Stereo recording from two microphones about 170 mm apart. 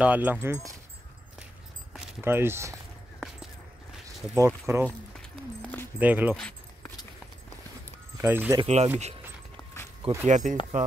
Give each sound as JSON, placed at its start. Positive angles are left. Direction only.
{"t": 0.0, "sound": "speech", "side_deg": -10}
{"t": 2.2, "sound": "speech", "side_deg": -15}
{"t": 4.4, "sound": "speech", "side_deg": -15}
{"t": 5.9, "sound": "speech", "side_deg": -10}
{"t": 6.3, "sound": "keys jangling", "side_deg": 5}
{"t": 8.2, "sound": "speech", "side_deg": -10}
{"t": 8.6, "sound": "speech", "side_deg": -40}
{"t": 10.2, "sound": "speech", "side_deg": -50}